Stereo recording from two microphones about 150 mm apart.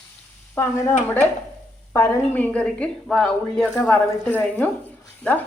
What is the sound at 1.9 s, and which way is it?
A woman's voice, 15° left (ahead or behind).